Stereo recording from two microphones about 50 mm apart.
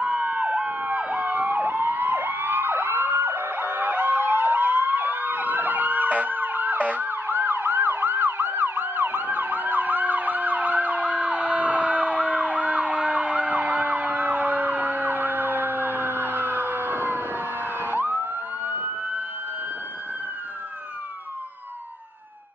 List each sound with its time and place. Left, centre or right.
0.0 s emergency vehicle: right